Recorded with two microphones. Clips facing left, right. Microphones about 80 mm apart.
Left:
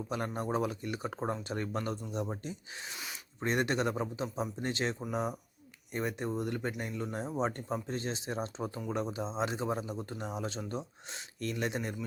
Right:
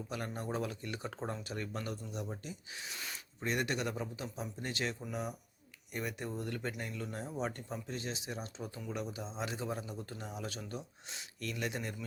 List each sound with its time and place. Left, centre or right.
0.1 s speech: left
7.7 s speech: left